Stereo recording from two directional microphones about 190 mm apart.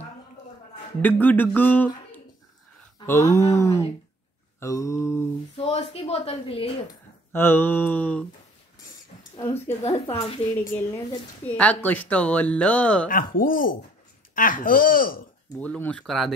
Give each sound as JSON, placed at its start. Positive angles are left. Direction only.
{"t": 1.0, "sound": "speech", "side_deg": 10}
{"t": 5.7, "sound": "a woman's voice", "side_deg": 35}
{"t": 7.3, "sound": "speech", "side_deg": 10}
{"t": 9.7, "sound": "a woman's voice", "side_deg": 30}
{"t": 11.1, "sound": "speech", "side_deg": 10}
{"t": 13.1, "sound": "speech", "side_deg": 45}
{"t": 15.6, "sound": "speech", "side_deg": 5}